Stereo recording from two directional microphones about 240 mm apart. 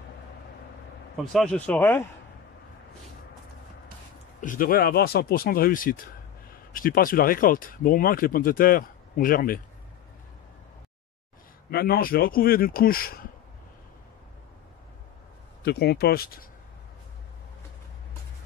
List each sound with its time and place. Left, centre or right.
1.1 s a man's voice: centre
4.4 s speech: left
11.7 s speech: left
15.6 s speech: left